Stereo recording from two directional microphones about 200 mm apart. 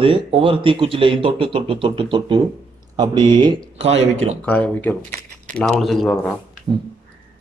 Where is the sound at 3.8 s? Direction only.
30° right (ahead or behind).